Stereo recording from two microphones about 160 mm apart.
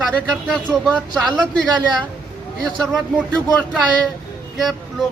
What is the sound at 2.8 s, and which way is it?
Speech, centre (ahead or behind).